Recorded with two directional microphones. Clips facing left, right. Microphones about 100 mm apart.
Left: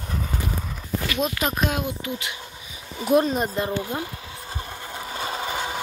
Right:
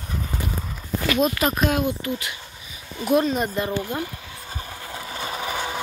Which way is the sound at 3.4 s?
25° left (ahead or behind).